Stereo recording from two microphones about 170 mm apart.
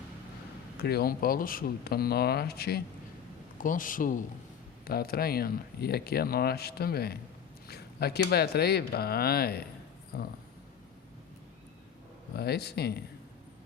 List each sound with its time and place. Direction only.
0.8 s speech: 65° left (ahead or behind)
3.6 s a man's voice: 50° left (ahead or behind)
4.9 s speech: 65° left (ahead or behind)
12.4 s speech: 70° left (ahead or behind)